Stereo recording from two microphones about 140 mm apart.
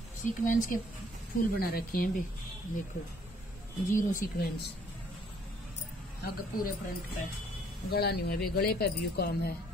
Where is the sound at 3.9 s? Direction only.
75° left (ahead or behind).